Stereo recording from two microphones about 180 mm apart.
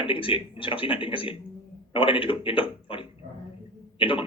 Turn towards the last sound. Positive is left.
turn(degrees=30)  # may be behind; listen again after turning